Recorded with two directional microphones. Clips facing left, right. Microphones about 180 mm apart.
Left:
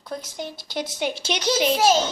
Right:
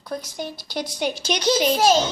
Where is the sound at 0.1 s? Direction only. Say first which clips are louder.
Right 2 dB; 25° left (ahead or behind).